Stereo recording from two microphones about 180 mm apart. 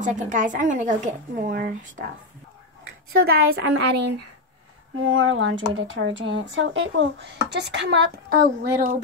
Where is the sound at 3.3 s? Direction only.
80° right.